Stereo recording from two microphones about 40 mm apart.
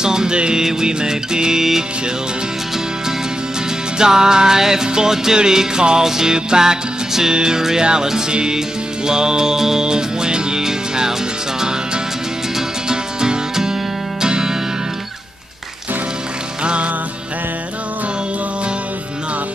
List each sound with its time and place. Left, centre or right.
0.0 s music: centre
4.0 s music: centre
12.5 s music: centre
16.6 s music: right